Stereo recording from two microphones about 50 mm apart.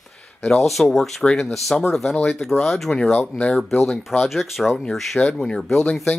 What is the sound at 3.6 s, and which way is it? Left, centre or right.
Speech, centre.